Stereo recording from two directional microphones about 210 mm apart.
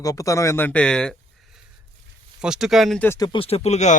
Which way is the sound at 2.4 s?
Centre (ahead or behind).